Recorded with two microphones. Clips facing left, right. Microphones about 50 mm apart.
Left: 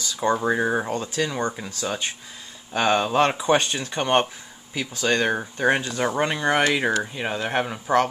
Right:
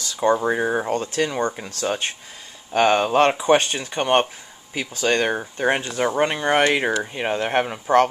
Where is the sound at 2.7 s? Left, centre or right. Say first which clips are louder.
Right 3 dB; right.